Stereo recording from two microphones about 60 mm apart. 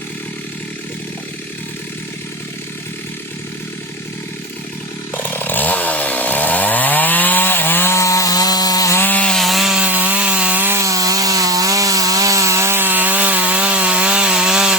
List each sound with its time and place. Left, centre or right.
5.1 s chainsaw: left
7.9 s wood: left
9.0 s rub: left
9.3 s wood: centre
9.7 s chainsaw: right
10.2 s rub: centre
10.8 s wood: right; by 14.8 s centre